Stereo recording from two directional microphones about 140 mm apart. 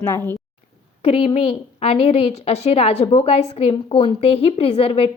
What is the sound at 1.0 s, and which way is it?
A woman's voice, 45° left (ahead or behind).